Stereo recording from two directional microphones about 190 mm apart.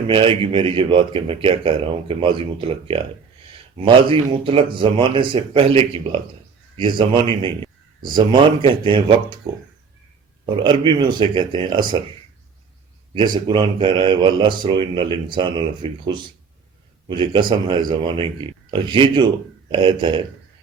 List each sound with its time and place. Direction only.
0.1 s speech: 25° right (ahead or behind)
10.4 s speech: 25° right (ahead or behind)
13.3 s speech: 25° right (ahead or behind)